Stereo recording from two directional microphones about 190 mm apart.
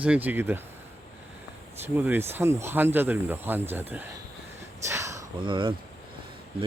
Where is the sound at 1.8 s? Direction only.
10° right (ahead or behind).